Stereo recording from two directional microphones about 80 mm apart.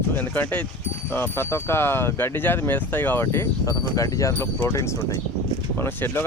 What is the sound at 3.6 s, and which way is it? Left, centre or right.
Speech, left.